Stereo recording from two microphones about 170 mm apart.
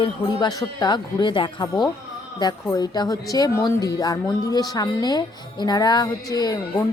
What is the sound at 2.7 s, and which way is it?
A woman's voice, 25° left (ahead or behind).